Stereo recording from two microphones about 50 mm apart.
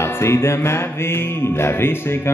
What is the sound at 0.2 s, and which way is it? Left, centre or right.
Music, left.